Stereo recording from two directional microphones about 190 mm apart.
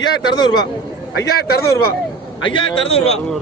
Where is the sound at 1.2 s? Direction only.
55° left (ahead or behind).